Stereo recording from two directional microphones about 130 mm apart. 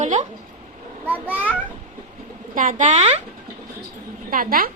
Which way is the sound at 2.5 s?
80° right.